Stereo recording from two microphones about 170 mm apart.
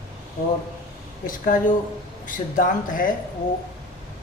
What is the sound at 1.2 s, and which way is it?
Speech, 55° left (ahead or behind).